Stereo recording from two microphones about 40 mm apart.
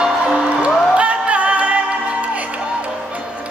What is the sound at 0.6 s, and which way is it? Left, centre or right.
Music, right.